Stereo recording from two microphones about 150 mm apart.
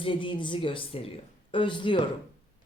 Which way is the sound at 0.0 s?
35° left (ahead or behind).